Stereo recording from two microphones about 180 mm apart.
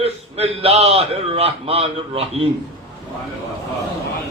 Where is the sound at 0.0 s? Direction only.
35° right (ahead or behind).